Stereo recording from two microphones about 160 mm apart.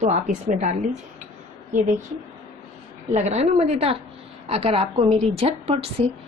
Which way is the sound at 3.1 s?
45° right (ahead or behind).